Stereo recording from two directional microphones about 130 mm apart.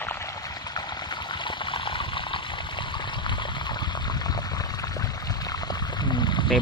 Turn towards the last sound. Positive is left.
turn(degrees=5)  # may be behind; listen again after turning